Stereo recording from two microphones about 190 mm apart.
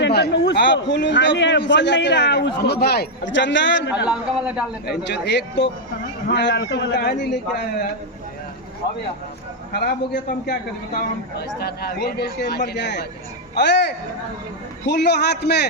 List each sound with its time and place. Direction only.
0.0 s a man's voice: 60° left (ahead or behind)
3.9 s a man's voice: 5° right (ahead or behind)
4.9 s a man's voice: 65° left (ahead or behind)
9.7 s a man's voice: 60° left (ahead or behind)